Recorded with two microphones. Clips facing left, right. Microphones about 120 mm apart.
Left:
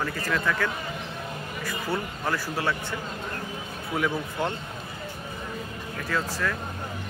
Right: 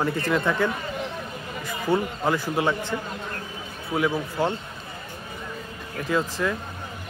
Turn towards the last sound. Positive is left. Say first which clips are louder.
# right 4 dB
turn(degrees=-15)  # may be behind; listen again after turning